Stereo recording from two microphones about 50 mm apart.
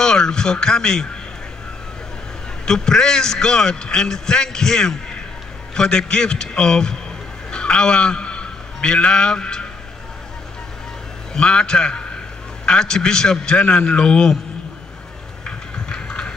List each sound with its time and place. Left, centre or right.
0.0 s speech: centre
2.6 s a man's voice: centre
11.3 s a man's voice: centre
15.4 s a sound: centre